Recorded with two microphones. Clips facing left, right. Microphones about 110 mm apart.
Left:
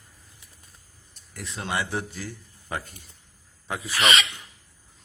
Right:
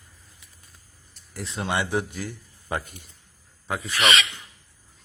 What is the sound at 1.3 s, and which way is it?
Speech, 30° right (ahead or behind).